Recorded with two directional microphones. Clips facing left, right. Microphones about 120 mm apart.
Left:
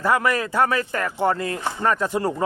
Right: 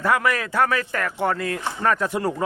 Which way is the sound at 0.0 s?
Centre (ahead or behind).